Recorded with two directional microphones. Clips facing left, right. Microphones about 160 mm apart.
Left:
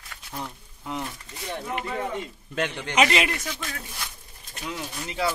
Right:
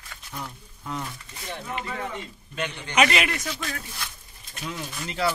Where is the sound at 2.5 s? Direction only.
80° left.